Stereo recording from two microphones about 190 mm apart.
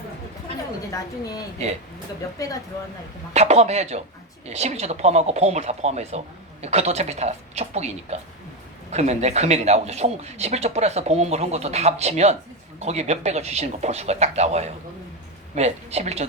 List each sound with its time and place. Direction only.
0.9 s a woman's voice: 20° left (ahead or behind)
3.3 s speech: 35° right (ahead or behind)